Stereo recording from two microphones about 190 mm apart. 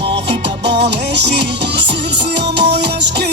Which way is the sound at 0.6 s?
65° right (ahead or behind).